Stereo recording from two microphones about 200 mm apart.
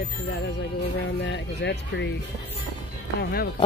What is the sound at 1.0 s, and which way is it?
Speech, 60° left (ahead or behind).